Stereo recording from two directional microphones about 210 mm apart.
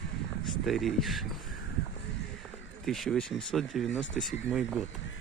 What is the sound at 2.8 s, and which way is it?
Speech, centre (ahead or behind).